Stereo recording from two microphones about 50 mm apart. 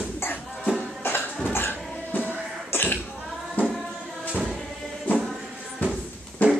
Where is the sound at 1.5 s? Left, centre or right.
Left.